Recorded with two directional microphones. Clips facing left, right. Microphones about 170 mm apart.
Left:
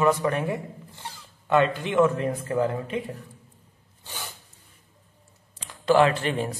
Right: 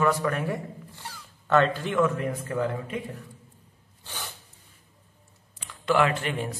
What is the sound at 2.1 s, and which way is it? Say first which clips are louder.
Speech: left 3 dB; 30° left (ahead or behind).